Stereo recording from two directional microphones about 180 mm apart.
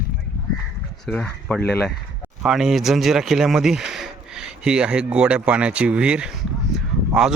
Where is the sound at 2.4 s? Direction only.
5° right (ahead or behind).